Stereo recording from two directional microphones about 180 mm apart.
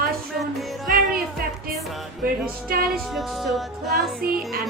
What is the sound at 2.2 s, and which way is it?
Speech, 55° right (ahead or behind).